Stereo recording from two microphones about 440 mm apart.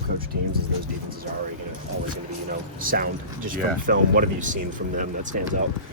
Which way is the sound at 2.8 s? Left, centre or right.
Centre.